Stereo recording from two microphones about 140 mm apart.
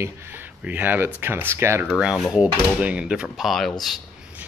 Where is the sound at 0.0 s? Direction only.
15° right (ahead or behind).